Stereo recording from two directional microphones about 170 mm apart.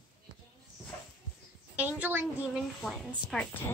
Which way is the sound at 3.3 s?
5° left (ahead or behind).